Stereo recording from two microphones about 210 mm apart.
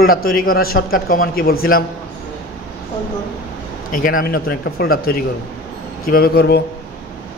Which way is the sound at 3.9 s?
40° left (ahead or behind).